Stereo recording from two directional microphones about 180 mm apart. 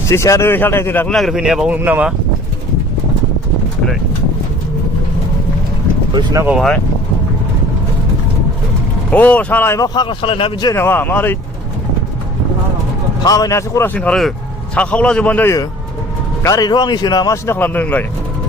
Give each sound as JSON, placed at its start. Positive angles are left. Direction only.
{"t": 0.1, "sound": "speech", "side_deg": 15}
{"t": 6.1, "sound": "speech", "side_deg": -20}
{"t": 6.5, "sound": "speech", "side_deg": 0}
{"t": 9.1, "sound": "a man's voice", "side_deg": 10}
{"t": 10.8, "sound": "speech", "side_deg": 10}
{"t": 13.2, "sound": "speech", "side_deg": 20}
{"t": 16.4, "sound": "a man's voice", "side_deg": 20}